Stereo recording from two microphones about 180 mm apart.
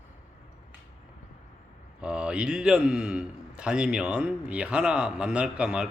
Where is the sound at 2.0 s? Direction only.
5° right (ahead or behind).